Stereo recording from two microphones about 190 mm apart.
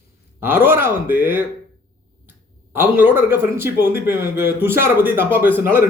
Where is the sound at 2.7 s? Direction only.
10° right (ahead or behind).